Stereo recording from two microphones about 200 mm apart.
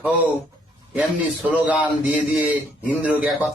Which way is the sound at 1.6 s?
5° right (ahead or behind).